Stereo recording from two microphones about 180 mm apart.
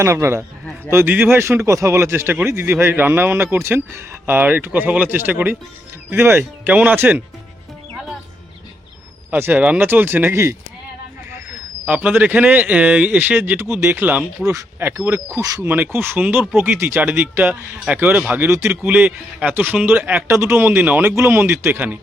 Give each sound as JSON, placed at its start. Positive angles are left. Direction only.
{"t": 0.0, "sound": "speech", "side_deg": -15}
{"t": 9.3, "sound": "speech", "side_deg": -10}
{"t": 11.9, "sound": "speech", "side_deg": -10}